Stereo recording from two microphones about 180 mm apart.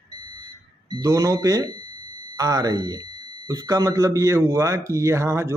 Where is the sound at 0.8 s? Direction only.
20° right (ahead or behind).